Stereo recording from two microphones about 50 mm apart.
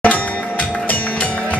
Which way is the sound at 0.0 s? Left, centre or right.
Left.